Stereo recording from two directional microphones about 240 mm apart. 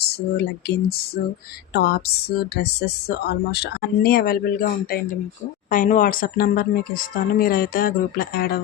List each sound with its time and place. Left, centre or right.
0.0 s a woman's voice: left
5.7 s a woman's voice: left